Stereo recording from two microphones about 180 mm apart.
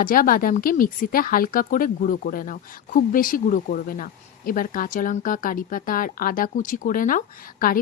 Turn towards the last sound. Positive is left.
turn(degrees=50)  # may be behind; listen again after turning